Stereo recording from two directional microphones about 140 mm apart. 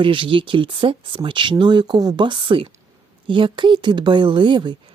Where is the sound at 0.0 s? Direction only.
35° right (ahead or behind).